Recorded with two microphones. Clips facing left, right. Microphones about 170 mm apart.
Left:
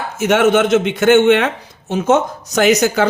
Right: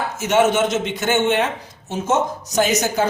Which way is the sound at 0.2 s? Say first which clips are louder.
Left 4 dB; 60° left (ahead or behind).